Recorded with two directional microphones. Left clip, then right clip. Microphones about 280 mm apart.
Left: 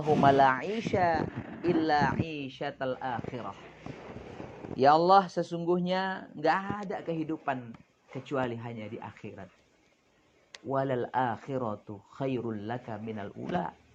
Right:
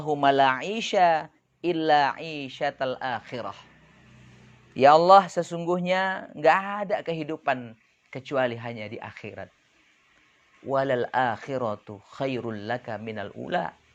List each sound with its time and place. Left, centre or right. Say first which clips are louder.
0.2 s speech: right 3 dB; right
4.8 s speech: right 6 dB; right
10.7 s speech: right 6 dB; right